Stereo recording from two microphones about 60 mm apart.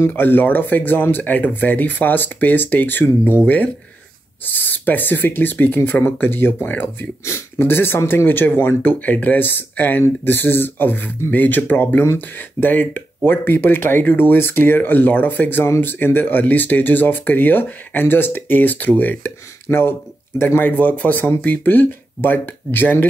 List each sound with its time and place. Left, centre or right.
0.1 s speech: left
7.2 s speech: left
19.7 s speech: left
20.7 s speech: left